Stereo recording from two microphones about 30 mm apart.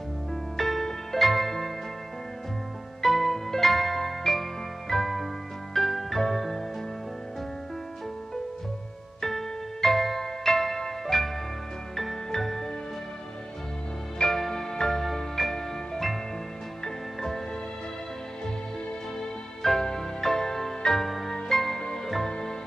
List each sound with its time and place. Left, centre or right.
0.6 s music: centre
3.0 s music: centre
9.2 s music: centre
14.1 s music: centre
19.1 s music: centre